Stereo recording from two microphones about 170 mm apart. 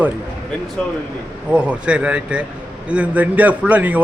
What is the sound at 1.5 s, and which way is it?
A man's voice, 5° right (ahead or behind).